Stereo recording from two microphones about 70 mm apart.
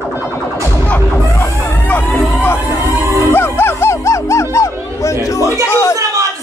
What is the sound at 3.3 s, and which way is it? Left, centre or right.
Music, left.